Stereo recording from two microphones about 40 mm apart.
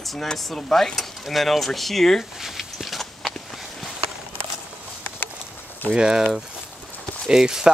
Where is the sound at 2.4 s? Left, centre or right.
Centre.